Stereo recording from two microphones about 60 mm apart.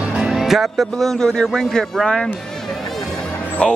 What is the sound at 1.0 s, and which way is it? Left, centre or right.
Speech, centre.